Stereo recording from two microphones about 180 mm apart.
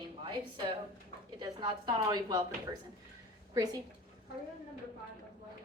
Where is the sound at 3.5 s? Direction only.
20° right (ahead or behind).